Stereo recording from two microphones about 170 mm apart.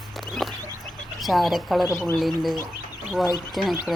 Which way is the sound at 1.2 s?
Centre (ahead or behind).